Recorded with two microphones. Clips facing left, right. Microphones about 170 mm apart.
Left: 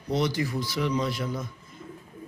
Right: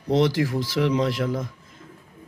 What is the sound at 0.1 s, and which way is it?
Speech, 90° right.